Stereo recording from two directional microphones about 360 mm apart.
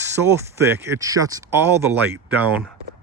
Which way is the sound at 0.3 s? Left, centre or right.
Centre.